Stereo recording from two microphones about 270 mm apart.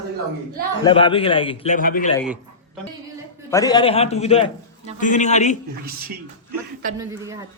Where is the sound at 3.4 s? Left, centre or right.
Centre.